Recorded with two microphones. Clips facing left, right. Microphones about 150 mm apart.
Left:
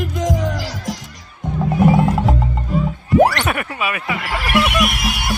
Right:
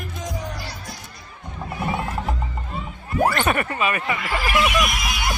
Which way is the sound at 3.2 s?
85° left.